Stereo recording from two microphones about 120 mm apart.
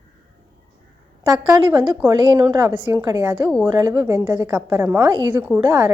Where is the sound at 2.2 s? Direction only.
40° right (ahead or behind).